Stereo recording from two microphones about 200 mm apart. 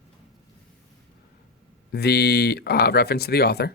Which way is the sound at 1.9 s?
55° left (ahead or behind).